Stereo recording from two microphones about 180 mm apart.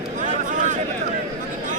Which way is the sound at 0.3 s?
45° right (ahead or behind).